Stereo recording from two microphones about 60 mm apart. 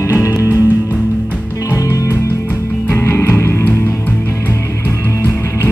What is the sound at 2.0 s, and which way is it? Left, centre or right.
Music, left.